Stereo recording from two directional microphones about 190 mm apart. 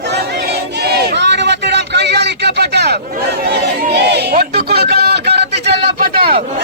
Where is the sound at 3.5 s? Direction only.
65° right (ahead or behind).